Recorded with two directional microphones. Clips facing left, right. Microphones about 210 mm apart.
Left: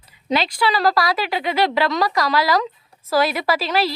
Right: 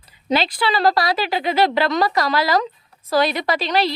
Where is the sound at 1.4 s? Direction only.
Centre (ahead or behind).